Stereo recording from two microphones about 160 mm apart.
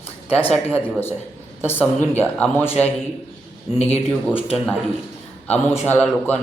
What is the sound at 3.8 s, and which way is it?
Speech, 40° left (ahead or behind).